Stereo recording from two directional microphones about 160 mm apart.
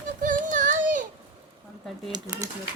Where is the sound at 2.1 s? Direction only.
20° right (ahead or behind).